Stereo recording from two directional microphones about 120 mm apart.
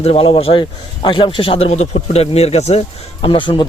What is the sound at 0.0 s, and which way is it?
Speech, 55° left (ahead or behind).